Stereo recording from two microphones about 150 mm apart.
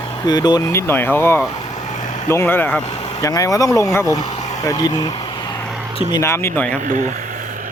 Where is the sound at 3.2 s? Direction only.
20° left (ahead or behind).